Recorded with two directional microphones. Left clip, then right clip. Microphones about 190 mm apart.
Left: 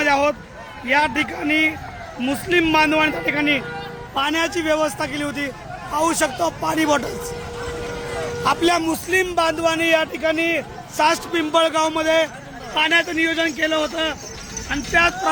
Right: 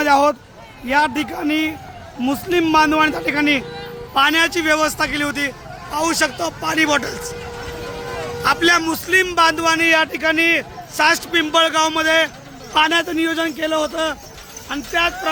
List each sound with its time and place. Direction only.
0.0 s a man's voice: 20° right (ahead or behind); by 7.1 s 10° left (ahead or behind)
8.4 s a man's voice: 5° left (ahead or behind)
12.7 s a man's voice: 15° right (ahead or behind)
14.7 s a man's voice: centre (ahead or behind)